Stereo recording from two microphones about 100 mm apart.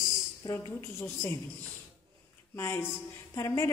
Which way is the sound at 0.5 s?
25° left (ahead or behind).